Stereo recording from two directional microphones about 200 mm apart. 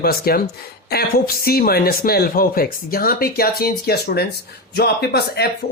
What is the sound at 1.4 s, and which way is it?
Speech, 50° left (ahead or behind).